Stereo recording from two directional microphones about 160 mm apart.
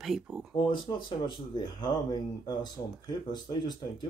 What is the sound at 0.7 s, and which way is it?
Speech, 30° left (ahead or behind).